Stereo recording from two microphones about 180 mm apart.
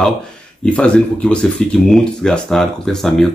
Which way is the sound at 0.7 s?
5° left (ahead or behind).